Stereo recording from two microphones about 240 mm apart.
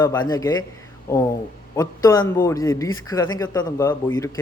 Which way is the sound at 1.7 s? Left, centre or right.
Centre.